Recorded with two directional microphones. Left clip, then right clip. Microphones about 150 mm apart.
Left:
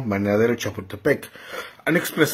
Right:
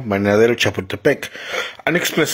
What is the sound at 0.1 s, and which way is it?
Speech, 30° right (ahead or behind).